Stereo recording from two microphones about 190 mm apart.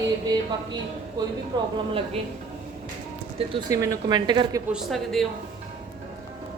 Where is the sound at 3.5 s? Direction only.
20° right (ahead or behind).